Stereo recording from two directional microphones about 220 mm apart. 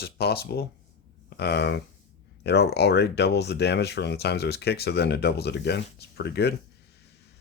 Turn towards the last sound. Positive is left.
turn(degrees=50)  # may be behind; listen again after turning